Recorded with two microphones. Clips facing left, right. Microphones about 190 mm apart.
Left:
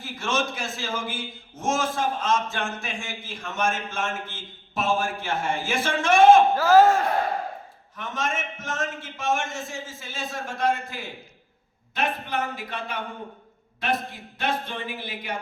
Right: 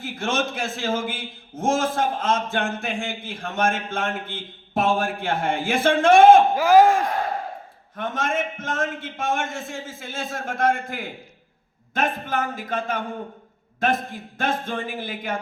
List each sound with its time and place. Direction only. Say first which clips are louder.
0.0 s a man's voice: right 2 dB; 55° right (ahead or behind)
6.6 s speech: right 2 dB; 15° right (ahead or behind)
7.9 s a man's voice: right 5 dB; 55° right (ahead or behind)